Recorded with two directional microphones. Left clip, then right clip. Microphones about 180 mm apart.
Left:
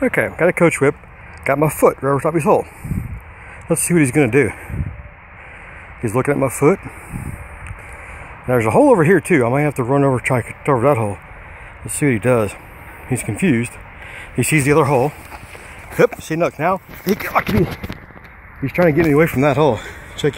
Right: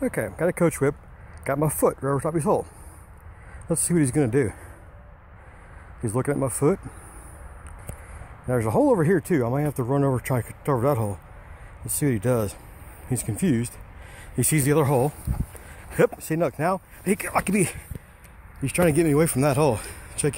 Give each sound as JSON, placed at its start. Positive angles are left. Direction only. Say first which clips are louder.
{"t": 0.1, "sound": "speech", "louder": "left 10 dB", "side_deg": -5}
{"t": 6.0, "sound": "speech", "louder": "left 8 dB", "side_deg": 0}
{"t": 8.5, "sound": "speech", "louder": "left 9 dB", "side_deg": 0}
{"t": 17.2, "sound": "speech", "louder": "left 8 dB", "side_deg": -20}
{"t": 18.6, "sound": "speech", "louder": "left 7 dB", "side_deg": -30}
{"t": 18.9, "sound": "speech", "louder": "left 7 dB", "side_deg": -10}